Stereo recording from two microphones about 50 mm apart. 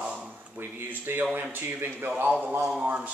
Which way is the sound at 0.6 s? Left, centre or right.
Right.